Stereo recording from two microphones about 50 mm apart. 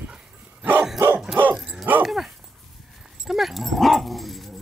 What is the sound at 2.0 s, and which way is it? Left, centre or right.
Speech, centre.